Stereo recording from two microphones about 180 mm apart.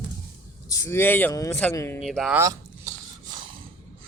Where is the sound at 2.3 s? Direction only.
15° right (ahead or behind).